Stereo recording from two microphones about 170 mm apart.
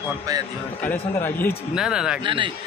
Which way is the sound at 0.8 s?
10° left (ahead or behind).